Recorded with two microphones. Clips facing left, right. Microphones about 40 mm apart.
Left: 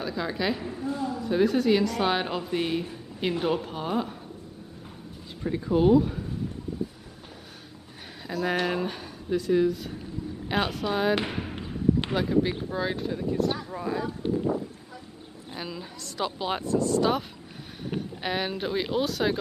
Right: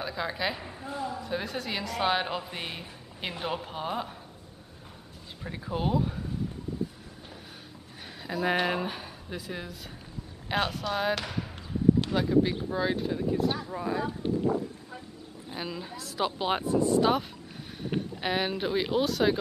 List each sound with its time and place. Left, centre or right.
0.0 s a woman's voice: centre
5.4 s a woman's voice: centre
8.3 s a woman's voice: centre
11.1 s basketball bounce: left
12.2 s a woman's voice: centre
15.5 s speech: centre
17.9 s a woman's voice: centre